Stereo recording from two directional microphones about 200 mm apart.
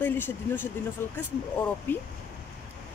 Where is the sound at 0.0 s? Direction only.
10° left (ahead or behind).